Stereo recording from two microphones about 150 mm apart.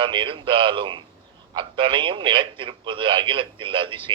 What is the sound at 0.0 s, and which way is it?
Speech, 35° right (ahead or behind).